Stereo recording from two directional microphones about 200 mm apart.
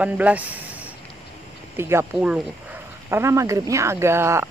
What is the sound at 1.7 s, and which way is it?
Speech, 10° right (ahead or behind).